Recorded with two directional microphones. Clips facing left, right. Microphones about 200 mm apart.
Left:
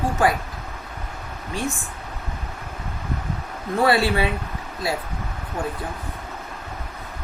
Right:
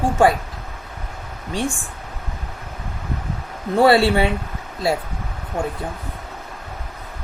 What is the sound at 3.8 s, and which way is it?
Speech, 30° right (ahead or behind).